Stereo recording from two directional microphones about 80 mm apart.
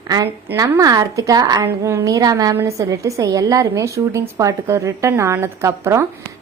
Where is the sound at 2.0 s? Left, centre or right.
Right.